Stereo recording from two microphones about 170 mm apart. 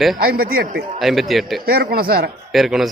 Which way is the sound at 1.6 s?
60° right (ahead or behind).